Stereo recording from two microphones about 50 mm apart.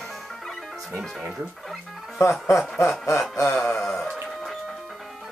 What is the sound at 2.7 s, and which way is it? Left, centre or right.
Snicker, left.